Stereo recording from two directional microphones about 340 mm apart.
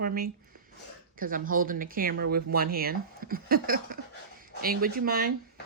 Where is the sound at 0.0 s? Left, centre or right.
Right.